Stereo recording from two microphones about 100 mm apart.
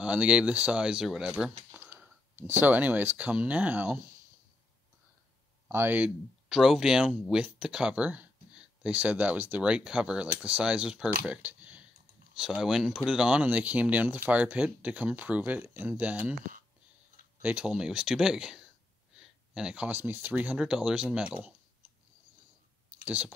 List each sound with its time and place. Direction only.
0.0 s speech: 10° right (ahead or behind)
1.8 s speech: 20° right (ahead or behind)
5.7 s speech: 20° right (ahead or behind)
6.5 s speech: 5° right (ahead or behind)
17.4 s speech: 15° right (ahead or behind)
19.1 s a sound: 5° right (ahead or behind)
19.9 s speech: 20° right (ahead or behind)
20.5 s speech: 5° right (ahead or behind)
23.0 s speech: 15° right (ahead or behind)